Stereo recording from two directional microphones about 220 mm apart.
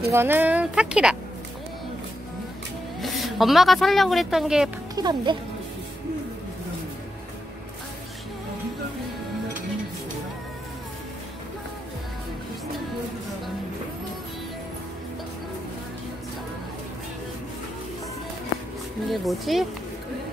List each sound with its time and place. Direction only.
0.1 s speech: 10° right (ahead or behind)
3.0 s speech: centre (ahead or behind)
4.9 s speech: 20° right (ahead or behind)
19.0 s speech: centre (ahead or behind)